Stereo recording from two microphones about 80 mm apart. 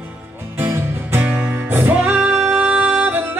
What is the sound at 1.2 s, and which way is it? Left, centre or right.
Music, centre.